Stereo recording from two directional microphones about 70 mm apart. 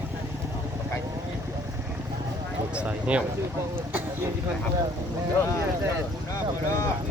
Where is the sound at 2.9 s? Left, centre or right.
Centre.